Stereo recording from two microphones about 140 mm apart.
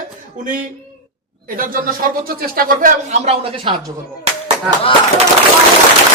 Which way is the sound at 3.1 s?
45° right (ahead or behind).